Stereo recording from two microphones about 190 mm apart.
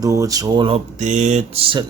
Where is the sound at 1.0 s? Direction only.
40° right (ahead or behind).